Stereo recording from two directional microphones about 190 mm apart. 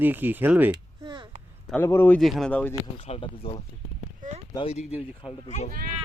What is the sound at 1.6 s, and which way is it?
Speech, 10° left (ahead or behind).